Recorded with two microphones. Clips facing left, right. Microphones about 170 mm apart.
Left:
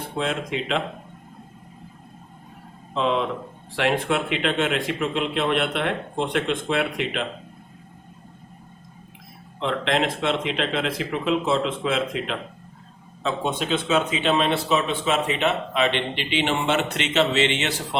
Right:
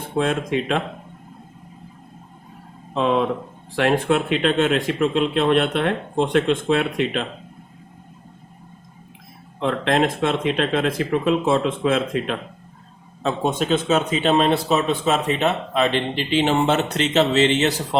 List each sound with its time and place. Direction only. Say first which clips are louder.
0.2 s speech: right 5 dB; 50° right (ahead or behind)
2.9 s speech: right 3 dB; 50° right (ahead or behind)
9.6 s speech: right 4 dB; 45° right (ahead or behind)